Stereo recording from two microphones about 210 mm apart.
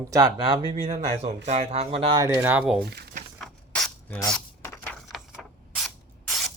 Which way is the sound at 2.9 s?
50° right (ahead or behind).